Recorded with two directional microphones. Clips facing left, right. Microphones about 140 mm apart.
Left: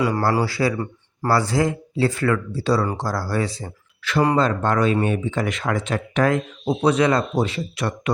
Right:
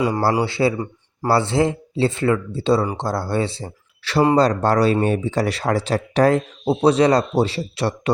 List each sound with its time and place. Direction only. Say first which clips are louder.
0.0 s a man's voice: right 1 dB; 25° right (ahead or behind)